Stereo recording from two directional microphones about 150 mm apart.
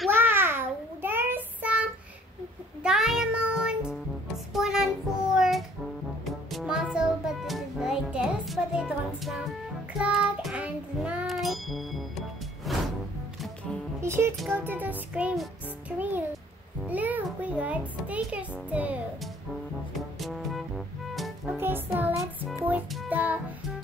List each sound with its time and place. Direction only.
0.1 s child singing: 15° right (ahead or behind)
2.8 s music: 5° right (ahead or behind)
4.6 s child singing: 5° right (ahead or behind)
6.2 s music: centre (ahead or behind)
9.9 s child singing: 5° right (ahead or behind)
12.7 s music: centre (ahead or behind)
14.0 s speech: 15° right (ahead or behind)
14.5 s music: 15° right (ahead or behind)
20.2 s music: centre (ahead or behind)
21.5 s music: 15° right (ahead or behind)